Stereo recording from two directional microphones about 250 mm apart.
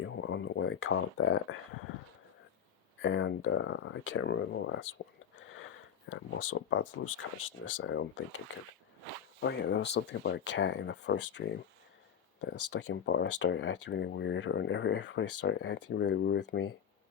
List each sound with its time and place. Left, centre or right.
0.0 s speech: left
3.0 s speech: left
5.4 s a sound: left
6.1 s speech: left
9.4 s speech: left
12.7 s speech: left